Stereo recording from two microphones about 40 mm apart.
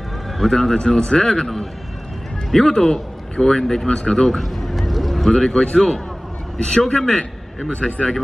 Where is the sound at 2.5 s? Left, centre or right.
Centre.